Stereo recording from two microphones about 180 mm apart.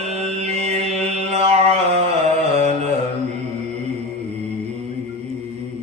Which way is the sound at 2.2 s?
35° right (ahead or behind).